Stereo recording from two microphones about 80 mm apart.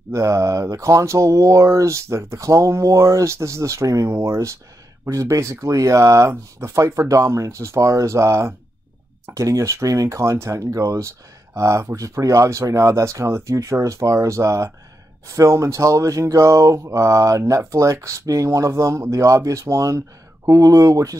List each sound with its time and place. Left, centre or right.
0.1 s speech: right